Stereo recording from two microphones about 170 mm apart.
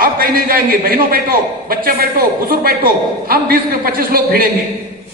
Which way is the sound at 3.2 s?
60° right (ahead or behind).